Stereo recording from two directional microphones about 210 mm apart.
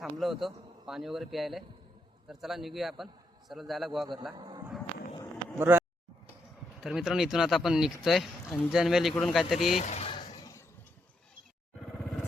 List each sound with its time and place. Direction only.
0.0 s speech: centre (ahead or behind)
4.4 s speech: 20° right (ahead or behind)
6.8 s speech: centre (ahead or behind)
9.7 s a sound: 30° left (ahead or behind)